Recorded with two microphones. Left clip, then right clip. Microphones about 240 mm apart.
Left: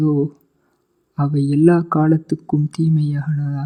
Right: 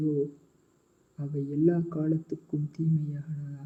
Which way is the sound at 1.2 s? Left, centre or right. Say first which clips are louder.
Left 12 dB; left.